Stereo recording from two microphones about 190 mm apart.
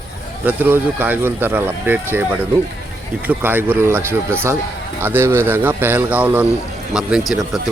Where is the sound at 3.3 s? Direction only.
10° right (ahead or behind).